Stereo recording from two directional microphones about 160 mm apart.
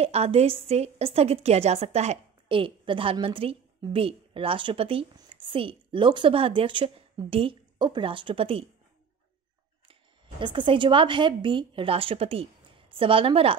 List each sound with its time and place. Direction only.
0.0 s a woman's voice: 40° right (ahead or behind)
9.8 s speech: 30° right (ahead or behind)